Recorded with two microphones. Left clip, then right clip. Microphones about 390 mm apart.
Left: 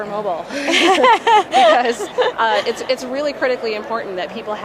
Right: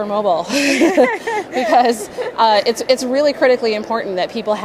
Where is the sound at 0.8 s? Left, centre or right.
Left.